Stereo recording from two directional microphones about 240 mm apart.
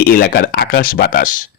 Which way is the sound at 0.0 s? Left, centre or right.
Left.